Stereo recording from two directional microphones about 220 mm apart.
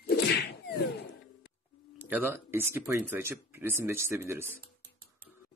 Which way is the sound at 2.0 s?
10° right (ahead or behind).